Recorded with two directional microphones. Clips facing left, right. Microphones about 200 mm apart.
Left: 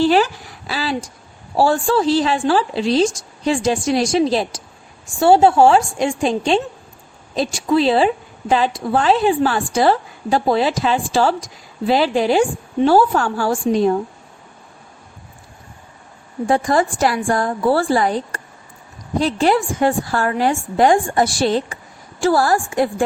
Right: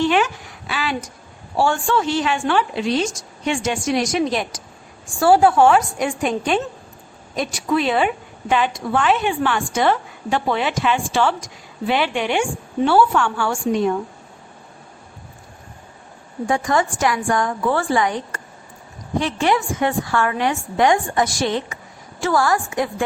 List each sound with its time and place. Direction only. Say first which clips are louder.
0.0 s a sound: left 3 dB; 35° left (ahead or behind)
1.5 s a woman's voice: left 3 dB; 35° left (ahead or behind)
16.5 s a woman's voice: left 3 dB; 35° left (ahead or behind)
19.2 s a woman's voice: left 4 dB; 35° left (ahead or behind)